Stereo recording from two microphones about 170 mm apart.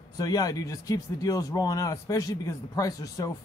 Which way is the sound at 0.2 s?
20° left (ahead or behind).